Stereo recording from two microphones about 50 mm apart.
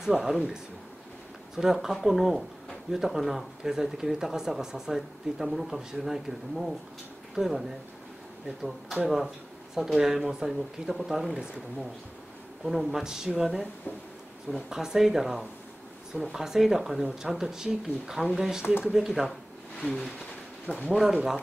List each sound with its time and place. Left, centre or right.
0.0 s speech: centre
1.6 s speech: centre
9.0 s speech: centre
12.6 s speech: centre
14.7 s speech: centre
19.8 s speech: left
20.9 s speech: centre